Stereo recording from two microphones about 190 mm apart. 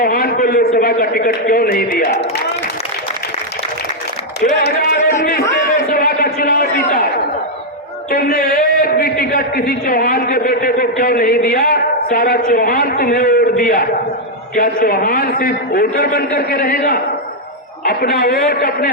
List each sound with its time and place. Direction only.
0.0 s a man's voice: 50° left (ahead or behind)
4.6 s speech: 55° left (ahead or behind)
5.5 s a sound: 50° left (ahead or behind)
8.1 s a man's voice: 55° left (ahead or behind)